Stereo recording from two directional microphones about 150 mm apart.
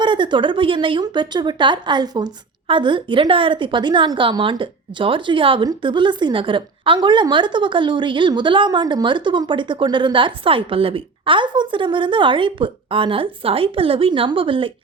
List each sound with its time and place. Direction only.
0.0 s speech: 30° right (ahead or behind)